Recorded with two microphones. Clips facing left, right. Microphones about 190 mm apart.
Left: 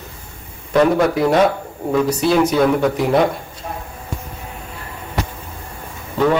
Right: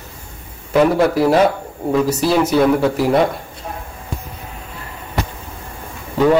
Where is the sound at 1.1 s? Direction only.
5° right (ahead or behind).